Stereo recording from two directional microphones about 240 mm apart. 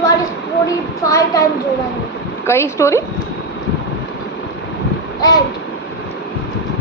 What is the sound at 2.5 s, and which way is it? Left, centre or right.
Speech, centre.